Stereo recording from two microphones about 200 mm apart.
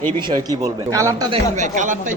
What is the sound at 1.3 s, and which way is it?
Speech, 40° right (ahead or behind).